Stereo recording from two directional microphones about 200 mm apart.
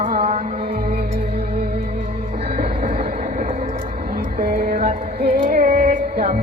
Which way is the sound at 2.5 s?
50° right (ahead or behind).